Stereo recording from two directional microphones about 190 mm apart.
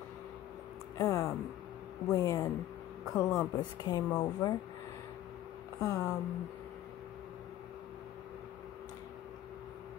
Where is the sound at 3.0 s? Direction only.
Centre (ahead or behind).